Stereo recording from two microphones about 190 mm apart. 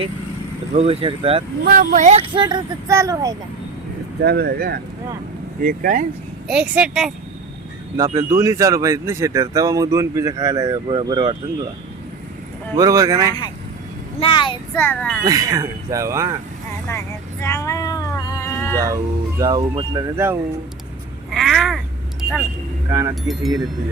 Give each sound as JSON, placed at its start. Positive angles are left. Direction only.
{"t": 0.7, "sound": "speech", "side_deg": -30}
{"t": 1.6, "sound": "speech", "side_deg": -50}
{"t": 4.2, "sound": "speech", "side_deg": -55}
{"t": 6.5, "sound": "speech", "side_deg": -5}
{"t": 7.9, "sound": "speech", "side_deg": -15}
{"t": 12.7, "sound": "speech", "side_deg": -20}
{"t": 14.2, "sound": "a child's voice", "side_deg": 25}
{"t": 14.8, "sound": "a child's voice", "side_deg": 5}
{"t": 15.2, "sound": "speech", "side_deg": -20}
{"t": 17.4, "sound": "female singing", "side_deg": 15}
{"t": 18.9, "sound": "speech", "side_deg": -20}
{"t": 21.3, "sound": "speech", "side_deg": 0}
{"t": 22.2, "sound": "vehicle", "side_deg": 0}
{"t": 22.9, "sound": "speech", "side_deg": -15}